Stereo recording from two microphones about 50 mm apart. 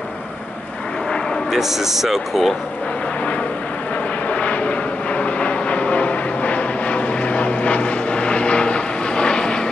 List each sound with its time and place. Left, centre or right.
1.5 s speech: centre
4.3 s vehicle: left